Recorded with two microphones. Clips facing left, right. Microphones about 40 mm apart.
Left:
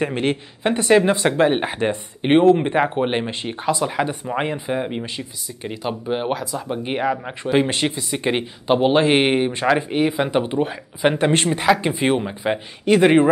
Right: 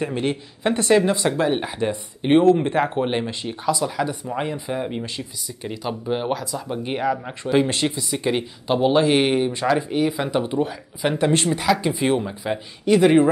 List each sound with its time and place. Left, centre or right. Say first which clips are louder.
0.0 s speech: left 3 dB; left